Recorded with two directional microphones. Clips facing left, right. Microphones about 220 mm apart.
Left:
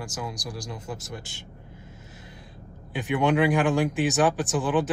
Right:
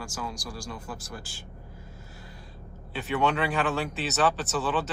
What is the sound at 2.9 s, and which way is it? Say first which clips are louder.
Speech: left 4 dB; 15° left (ahead or behind).